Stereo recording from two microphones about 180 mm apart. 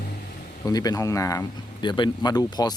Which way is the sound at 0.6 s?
20° left (ahead or behind).